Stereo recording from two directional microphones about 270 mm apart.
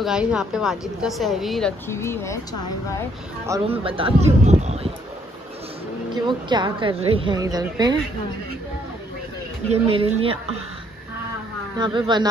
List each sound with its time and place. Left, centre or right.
0.0 s speech: centre
3.4 s speech: centre
6.2 s a woman's voice: centre
9.7 s speech: centre
11.8 s a woman's voice: centre